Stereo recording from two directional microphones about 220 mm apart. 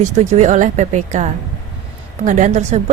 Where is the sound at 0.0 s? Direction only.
35° right (ahead or behind).